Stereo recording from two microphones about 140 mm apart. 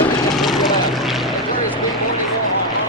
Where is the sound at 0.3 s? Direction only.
Centre (ahead or behind).